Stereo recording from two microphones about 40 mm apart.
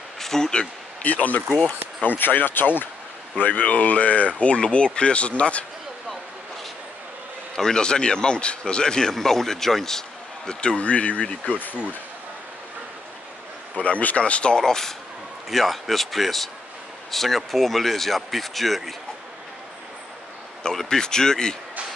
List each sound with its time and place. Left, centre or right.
0.2 s a sound: centre
1.0 s speech: left
3.3 s speech: left
7.5 s a man's voice: centre
10.8 s speech: left
11.5 s speech: left
13.7 s speech: left
14.6 s speech: centre
20.7 s speech: centre